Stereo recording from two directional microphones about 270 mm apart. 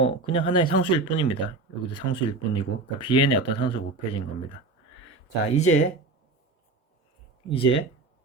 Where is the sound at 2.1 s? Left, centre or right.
Centre.